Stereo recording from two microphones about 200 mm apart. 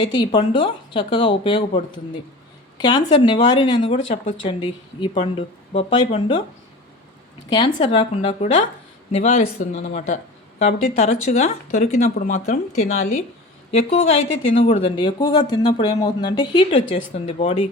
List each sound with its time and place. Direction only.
0.0 s speech: 25° left (ahead or behind)
2.7 s speech: 20° left (ahead or behind)
7.8 s speech: 25° left (ahead or behind)
12.1 s speech: 50° left (ahead or behind)
12.5 s speech: 35° left (ahead or behind)